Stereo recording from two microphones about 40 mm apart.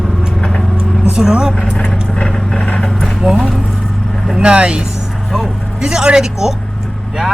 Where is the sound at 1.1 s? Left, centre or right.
Right.